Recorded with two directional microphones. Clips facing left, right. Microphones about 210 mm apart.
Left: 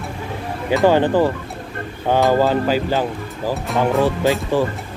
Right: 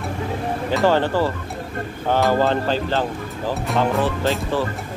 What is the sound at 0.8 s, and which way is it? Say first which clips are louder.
Speech: left 4 dB; 15° left (ahead or behind).